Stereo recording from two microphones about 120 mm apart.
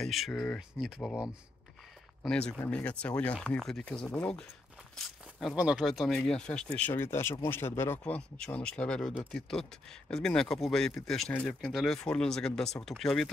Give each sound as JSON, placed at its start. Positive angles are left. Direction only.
{"t": 0.0, "sound": "speech", "side_deg": 0}
{"t": 0.6, "sound": "speech", "side_deg": -5}
{"t": 2.2, "sound": "speech", "side_deg": 5}
{"t": 4.9, "sound": "walk", "side_deg": 0}
{"t": 5.6, "sound": "speech", "side_deg": -5}
{"t": 6.9, "sound": "speech", "side_deg": 20}